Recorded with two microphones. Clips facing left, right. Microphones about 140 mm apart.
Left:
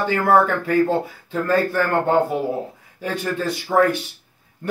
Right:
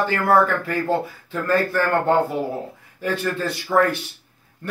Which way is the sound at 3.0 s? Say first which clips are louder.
Even; 15° left (ahead or behind).